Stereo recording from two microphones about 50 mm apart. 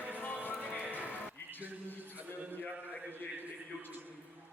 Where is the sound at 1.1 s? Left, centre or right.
Left.